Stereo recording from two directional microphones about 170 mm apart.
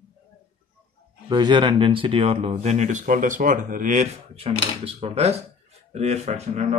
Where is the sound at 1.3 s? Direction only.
25° right (ahead or behind).